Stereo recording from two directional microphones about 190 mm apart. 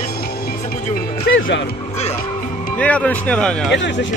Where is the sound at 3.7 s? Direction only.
70° left (ahead or behind).